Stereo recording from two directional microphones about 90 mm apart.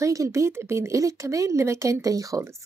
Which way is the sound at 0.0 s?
35° right (ahead or behind).